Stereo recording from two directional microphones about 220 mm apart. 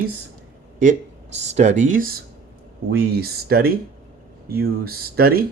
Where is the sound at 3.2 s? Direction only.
45° right (ahead or behind).